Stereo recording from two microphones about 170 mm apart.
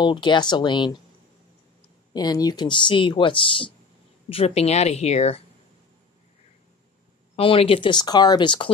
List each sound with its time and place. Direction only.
0.0 s speech: 25° left (ahead or behind)
2.1 s a woman's voice: 25° left (ahead or behind); by 5.4 s 40° left (ahead or behind)
7.3 s speech: 35° left (ahead or behind)